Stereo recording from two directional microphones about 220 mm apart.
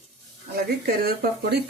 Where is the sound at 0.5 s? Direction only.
45° right (ahead or behind).